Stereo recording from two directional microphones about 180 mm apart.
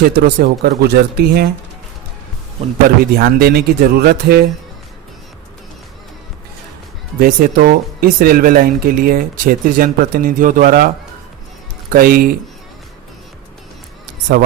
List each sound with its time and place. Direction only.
0.2 s speech: 60° right (ahead or behind)
3.0 s speech: 55° right (ahead or behind)
7.2 s speech: 55° right (ahead or behind)
11.9 s speech: 55° right (ahead or behind)